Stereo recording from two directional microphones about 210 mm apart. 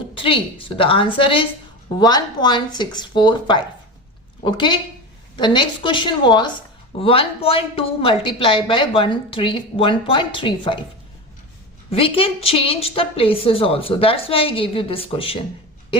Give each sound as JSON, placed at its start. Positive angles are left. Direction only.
{"t": 0.1, "sound": "a woman's voice", "side_deg": 25}
{"t": 11.9, "sound": "a woman's voice", "side_deg": 25}